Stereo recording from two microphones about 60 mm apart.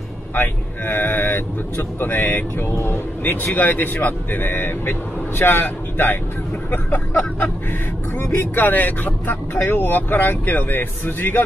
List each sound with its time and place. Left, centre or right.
0.3 s speech: left
3.5 s speech: left